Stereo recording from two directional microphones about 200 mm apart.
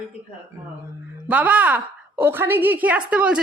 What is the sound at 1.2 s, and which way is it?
Speech, 5° right (ahead or behind).